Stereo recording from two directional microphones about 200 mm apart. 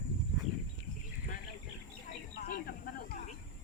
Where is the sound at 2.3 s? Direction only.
50° left (ahead or behind).